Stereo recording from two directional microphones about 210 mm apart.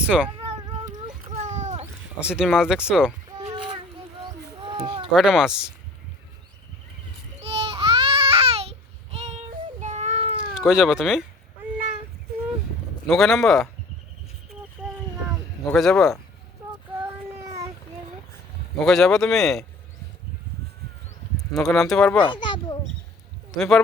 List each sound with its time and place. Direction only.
0.0 s speech: 5° right (ahead or behind)
0.9 s a sound: 35° right (ahead or behind)
2.2 s speech: 5° right (ahead or behind)
4.6 s a sound: 20° right (ahead or behind)
5.1 s speech: 5° right (ahead or behind)
7.4 s baby cry: 30° right (ahead or behind)
9.1 s child singing: 30° right (ahead or behind)
10.7 s speech: 5° right (ahead or behind)
13.1 s speech: centre (ahead or behind)
15.6 s speech: centre (ahead or behind)
18.8 s speech: centre (ahead or behind)
21.3 s speech: centre (ahead or behind)
22.2 s children playing: 20° left (ahead or behind)
23.5 s speech: centre (ahead or behind)